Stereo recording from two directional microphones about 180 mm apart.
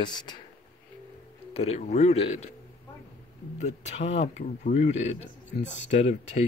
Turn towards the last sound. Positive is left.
turn(degrees=40)  # may be behind; listen again after turning